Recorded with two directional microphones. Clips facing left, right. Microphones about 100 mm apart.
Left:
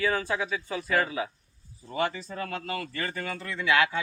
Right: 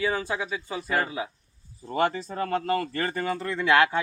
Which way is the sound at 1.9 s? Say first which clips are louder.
Right 4 dB; 40° right (ahead or behind).